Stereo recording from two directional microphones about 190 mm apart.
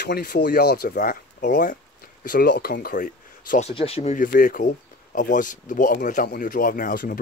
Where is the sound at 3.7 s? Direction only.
30° left (ahead or behind).